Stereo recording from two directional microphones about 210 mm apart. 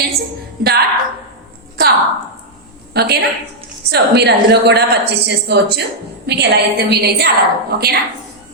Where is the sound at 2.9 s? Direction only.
50° right (ahead or behind).